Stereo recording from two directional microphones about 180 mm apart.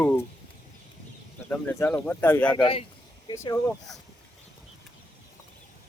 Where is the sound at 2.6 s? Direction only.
30° left (ahead or behind).